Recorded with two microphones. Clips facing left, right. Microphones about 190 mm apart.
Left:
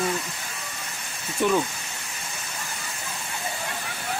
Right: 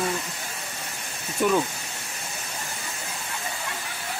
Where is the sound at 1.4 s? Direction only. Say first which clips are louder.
Even; 5° right (ahead or behind).